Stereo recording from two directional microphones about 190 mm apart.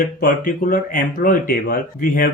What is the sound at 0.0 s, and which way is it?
Speech, 45° left (ahead or behind).